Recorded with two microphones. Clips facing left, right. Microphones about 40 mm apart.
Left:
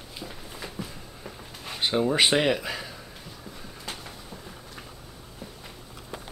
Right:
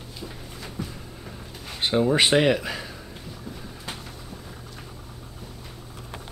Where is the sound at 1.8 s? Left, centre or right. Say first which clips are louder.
Right 2 dB; centre.